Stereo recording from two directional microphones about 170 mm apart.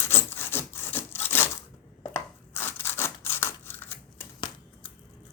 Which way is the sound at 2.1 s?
15° left (ahead or behind).